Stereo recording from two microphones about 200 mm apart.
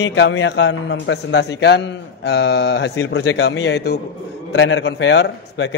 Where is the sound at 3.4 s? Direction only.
60° left (ahead or behind).